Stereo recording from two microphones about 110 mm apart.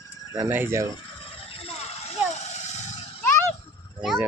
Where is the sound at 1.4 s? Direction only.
60° left (ahead or behind).